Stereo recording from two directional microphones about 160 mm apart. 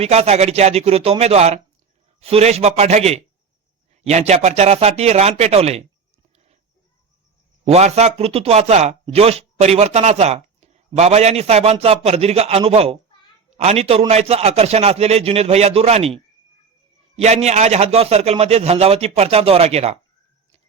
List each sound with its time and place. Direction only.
0.0 s speech: 40° right (ahead or behind)
7.6 s speech: 45° right (ahead or behind)